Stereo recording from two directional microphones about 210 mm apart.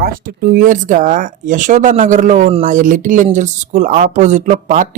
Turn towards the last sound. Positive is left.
turn(degrees=-35)  # may be behind; listen again after turning